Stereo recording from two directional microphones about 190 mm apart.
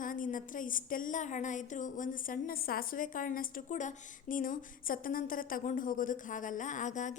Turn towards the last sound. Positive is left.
turn(degrees=40)  # may be behind; listen again after turning